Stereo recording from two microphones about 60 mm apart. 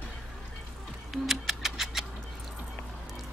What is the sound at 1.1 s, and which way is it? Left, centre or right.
Music, centre.